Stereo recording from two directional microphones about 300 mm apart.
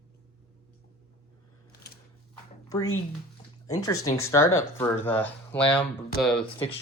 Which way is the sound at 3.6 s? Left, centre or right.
Centre.